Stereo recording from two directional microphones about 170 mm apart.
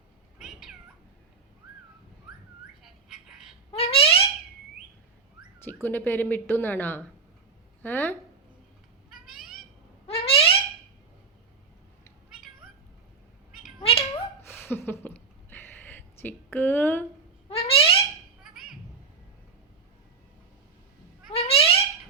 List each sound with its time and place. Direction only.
0.3 s cat: centre (ahead or behind)
2.8 s bird: centre (ahead or behind)
3.7 s a sound: 35° left (ahead or behind)
5.6 s a woman's voice: 10° left (ahead or behind)
9.0 s cat: 5° right (ahead or behind)
10.1 s a sound: 35° left (ahead or behind)
13.5 s cat: centre (ahead or behind)
13.8 s cat: 35° left (ahead or behind)
14.4 s a sound: 10° left (ahead or behind)
17.5 s a sound: 35° left (ahead or behind)
18.4 s music: centre (ahead or behind)
21.2 s cat: 35° left (ahead or behind)